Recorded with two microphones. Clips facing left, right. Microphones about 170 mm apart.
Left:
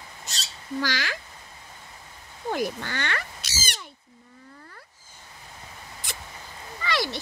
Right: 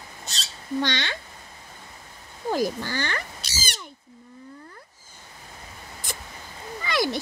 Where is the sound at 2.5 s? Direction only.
35° right (ahead or behind).